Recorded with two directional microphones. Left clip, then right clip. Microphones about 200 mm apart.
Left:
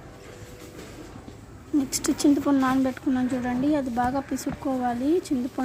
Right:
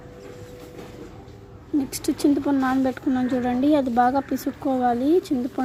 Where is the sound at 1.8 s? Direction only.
10° right (ahead or behind).